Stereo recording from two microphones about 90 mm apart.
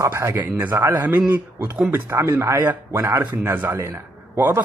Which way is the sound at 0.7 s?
35° right (ahead or behind).